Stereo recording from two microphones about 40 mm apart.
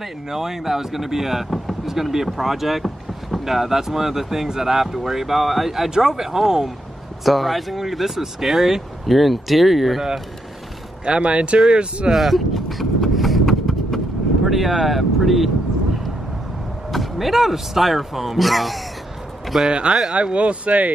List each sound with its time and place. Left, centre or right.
0.0 s speech: centre
11.1 s speech: right
12.1 s clip-clop: centre
14.4 s speech: centre
16.9 s speech: centre
19.4 s a sound: centre
19.9 s speech: centre
20.3 s speech: right